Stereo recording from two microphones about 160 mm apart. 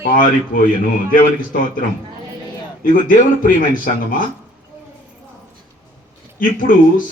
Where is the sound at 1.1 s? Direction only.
60° left (ahead or behind).